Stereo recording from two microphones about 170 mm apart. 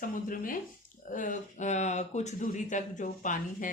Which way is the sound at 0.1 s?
50° left (ahead or behind).